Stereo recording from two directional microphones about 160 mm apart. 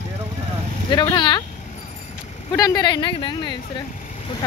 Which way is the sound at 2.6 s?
25° left (ahead or behind).